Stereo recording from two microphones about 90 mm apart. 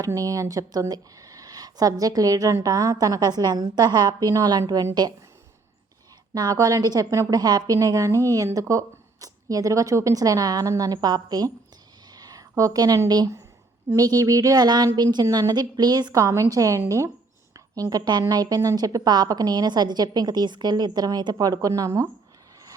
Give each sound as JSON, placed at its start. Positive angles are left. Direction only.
{"t": 0.0, "sound": "a woman's voice", "side_deg": -40}
{"t": 6.3, "sound": "a woman's voice", "side_deg": -45}
{"t": 12.1, "sound": "a sound", "side_deg": -45}
{"t": 13.1, "sound": "a woman's voice", "side_deg": -50}